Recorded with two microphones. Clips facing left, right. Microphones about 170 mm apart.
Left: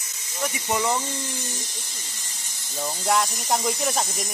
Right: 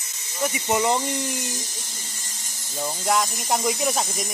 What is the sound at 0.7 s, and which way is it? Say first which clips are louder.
Speech: right 3 dB; 20° right (ahead or behind).